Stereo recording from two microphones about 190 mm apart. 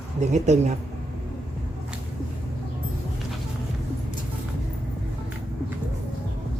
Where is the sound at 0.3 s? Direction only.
35° right (ahead or behind).